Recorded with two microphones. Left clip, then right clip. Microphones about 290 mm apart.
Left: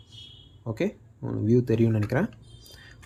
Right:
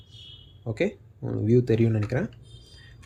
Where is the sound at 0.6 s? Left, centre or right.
Centre.